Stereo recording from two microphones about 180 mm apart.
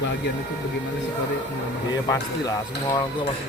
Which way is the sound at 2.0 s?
20° left (ahead or behind).